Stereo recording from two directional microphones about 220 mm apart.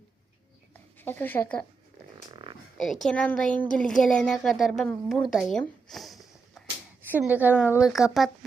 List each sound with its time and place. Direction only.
0.7 s a sound: 10° left (ahead or behind)
2.3 s frog: 20° right (ahead or behind)
2.7 s a woman's voice: centre (ahead or behind)